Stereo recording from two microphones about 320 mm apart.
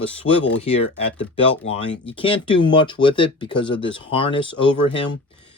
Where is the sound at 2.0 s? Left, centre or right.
Centre.